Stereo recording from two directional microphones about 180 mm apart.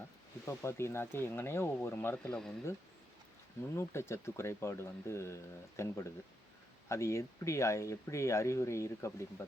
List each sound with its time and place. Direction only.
0.4 s speech: 15° left (ahead or behind)
3.8 s speech: 15° left (ahead or behind)